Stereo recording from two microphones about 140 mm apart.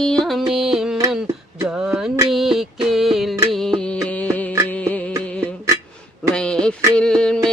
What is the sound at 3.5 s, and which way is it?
Music, centre (ahead or behind).